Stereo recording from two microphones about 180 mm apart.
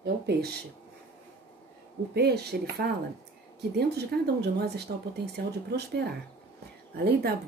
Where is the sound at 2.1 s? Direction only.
65° right (ahead or behind).